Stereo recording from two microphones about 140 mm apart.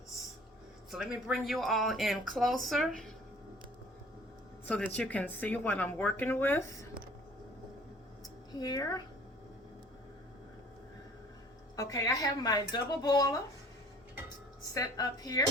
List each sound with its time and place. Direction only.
0.9 s speech: centre (ahead or behind)
4.6 s speech: 10° left (ahead or behind)
8.5 s speech: 25° left (ahead or behind)
11.8 s speech: 25° left (ahead or behind)
14.7 s speech: 25° left (ahead or behind)